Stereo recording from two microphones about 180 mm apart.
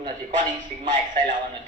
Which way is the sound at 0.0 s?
45° right (ahead or behind).